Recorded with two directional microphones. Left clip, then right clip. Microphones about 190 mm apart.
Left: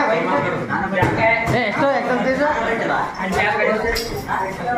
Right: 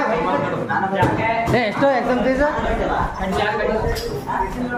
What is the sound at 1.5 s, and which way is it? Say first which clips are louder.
Chatter: right 1 dB; 25° right (ahead or behind).